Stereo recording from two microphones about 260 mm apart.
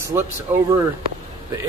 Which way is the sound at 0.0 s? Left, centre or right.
Centre.